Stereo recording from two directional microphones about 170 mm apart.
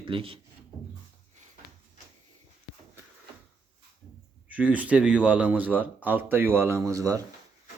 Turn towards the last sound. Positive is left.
turn(degrees=-20)  # may be behind; listen again after turning